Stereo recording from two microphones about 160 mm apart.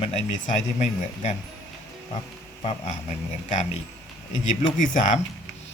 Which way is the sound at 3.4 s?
50° left (ahead or behind).